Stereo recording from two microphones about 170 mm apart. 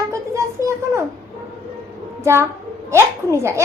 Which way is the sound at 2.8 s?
15° right (ahead or behind).